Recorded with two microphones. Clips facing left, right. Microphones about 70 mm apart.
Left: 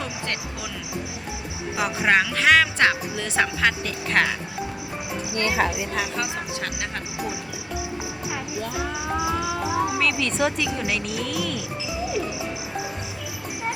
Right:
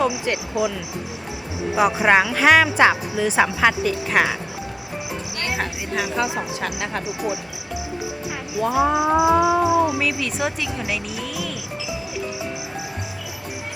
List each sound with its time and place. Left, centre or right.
0.0 s speech: centre
1.7 s speech: centre
6.1 s speech: centre
8.7 s music: right
10.0 s speech: centre